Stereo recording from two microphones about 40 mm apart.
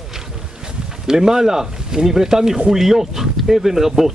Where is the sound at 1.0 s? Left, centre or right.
Centre.